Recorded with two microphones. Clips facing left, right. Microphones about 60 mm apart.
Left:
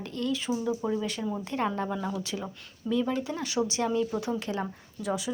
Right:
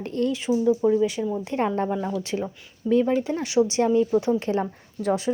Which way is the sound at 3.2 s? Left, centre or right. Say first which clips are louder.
Right 8 dB; right.